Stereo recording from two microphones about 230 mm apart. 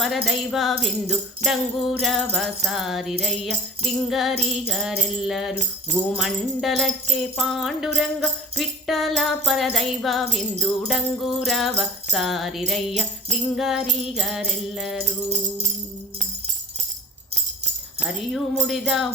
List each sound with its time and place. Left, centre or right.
0.0 s music: centre
15.3 s music: right
18.0 s music: centre